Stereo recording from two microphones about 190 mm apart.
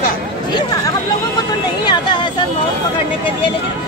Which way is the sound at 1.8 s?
25° left (ahead or behind).